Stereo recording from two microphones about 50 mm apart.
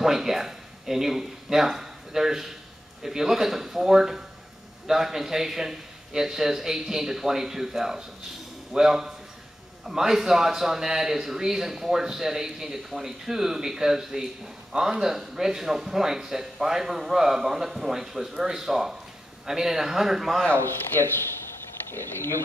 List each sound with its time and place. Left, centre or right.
0.0 s a man's voice: centre
21.9 s speech: left